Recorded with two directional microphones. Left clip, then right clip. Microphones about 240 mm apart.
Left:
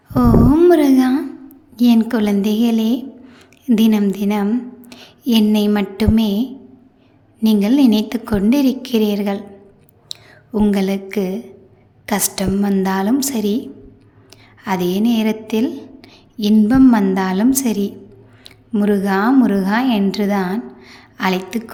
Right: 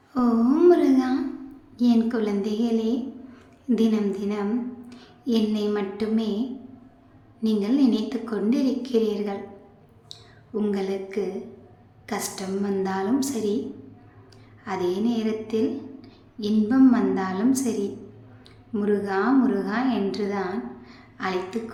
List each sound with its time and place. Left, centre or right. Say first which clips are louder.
0.1 s a woman's voice: left 9 dB; left
14.6 s a woman's voice: left 7 dB; left